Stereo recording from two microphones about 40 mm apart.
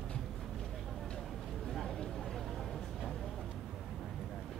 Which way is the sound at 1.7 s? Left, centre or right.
Centre.